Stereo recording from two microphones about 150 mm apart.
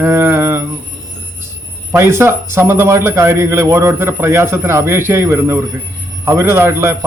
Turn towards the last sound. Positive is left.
turn(degrees=-20)  # may be behind; listen again after turning